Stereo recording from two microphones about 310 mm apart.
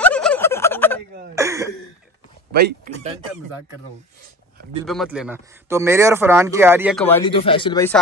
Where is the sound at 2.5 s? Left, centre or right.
Right.